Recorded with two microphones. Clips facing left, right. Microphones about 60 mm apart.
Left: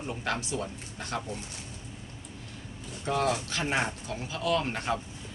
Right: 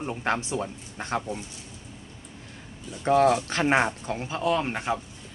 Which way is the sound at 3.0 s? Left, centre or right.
Right.